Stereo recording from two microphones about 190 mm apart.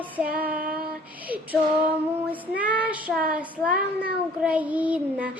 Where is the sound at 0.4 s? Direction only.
50° right (ahead or behind).